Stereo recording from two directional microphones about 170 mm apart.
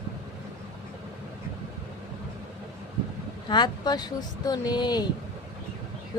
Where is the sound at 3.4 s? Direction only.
25° left (ahead or behind).